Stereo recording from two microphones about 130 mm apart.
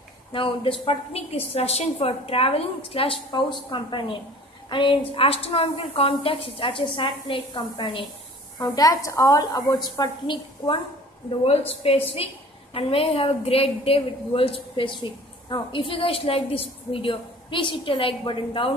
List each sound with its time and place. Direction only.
0.3 s a woman's voice: 40° left (ahead or behind)
3.3 s a woman's voice: 35° left (ahead or behind)
11.2 s a woman's voice: 50° left (ahead or behind)